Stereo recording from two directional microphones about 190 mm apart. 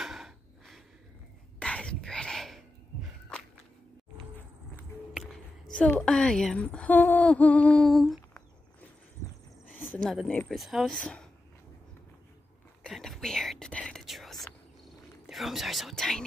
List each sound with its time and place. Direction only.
0.0 s a sound: centre (ahead or behind)
1.6 s whispering: 5° left (ahead or behind)
5.8 s speech: 5° left (ahead or behind)
9.8 s speech: centre (ahead or behind)
12.8 s whispering: centre (ahead or behind)